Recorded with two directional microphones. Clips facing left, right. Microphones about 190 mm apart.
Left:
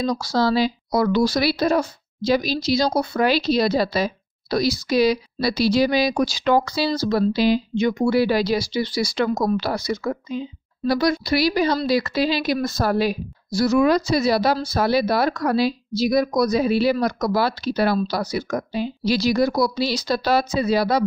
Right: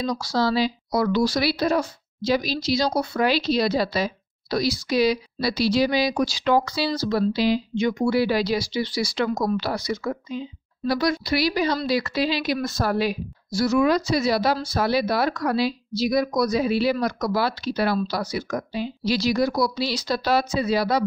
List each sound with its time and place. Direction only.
0.0 s speech: 45° left (ahead or behind)